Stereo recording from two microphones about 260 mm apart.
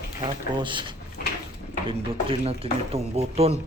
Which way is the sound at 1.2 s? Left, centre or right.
Left.